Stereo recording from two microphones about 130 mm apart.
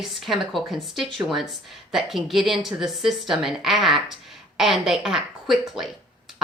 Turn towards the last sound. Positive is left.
turn(degrees=0)  # may be behind; listen again after turning